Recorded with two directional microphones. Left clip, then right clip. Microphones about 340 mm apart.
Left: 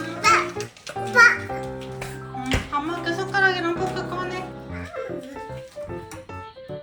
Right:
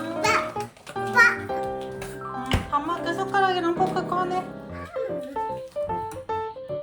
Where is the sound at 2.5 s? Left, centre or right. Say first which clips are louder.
Left 3 dB; right.